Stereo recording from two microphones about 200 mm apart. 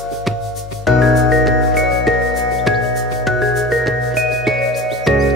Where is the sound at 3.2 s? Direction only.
Centre (ahead or behind).